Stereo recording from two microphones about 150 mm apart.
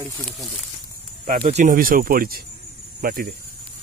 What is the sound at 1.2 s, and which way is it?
Speech, 60° right (ahead or behind).